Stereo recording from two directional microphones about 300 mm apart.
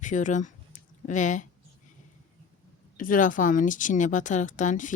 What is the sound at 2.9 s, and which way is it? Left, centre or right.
A woman's voice, left.